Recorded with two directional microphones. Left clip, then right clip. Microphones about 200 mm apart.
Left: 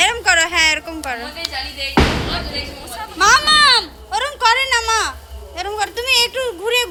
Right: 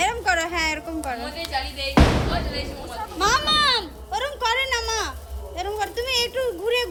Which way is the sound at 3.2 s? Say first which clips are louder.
Left 8 dB; 10° left (ahead or behind).